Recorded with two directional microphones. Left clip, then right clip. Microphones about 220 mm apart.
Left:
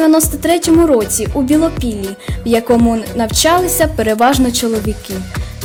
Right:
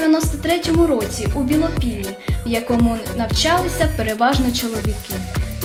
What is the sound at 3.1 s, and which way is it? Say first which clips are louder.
A woman's voice: left 6 dB; 55° left (ahead or behind).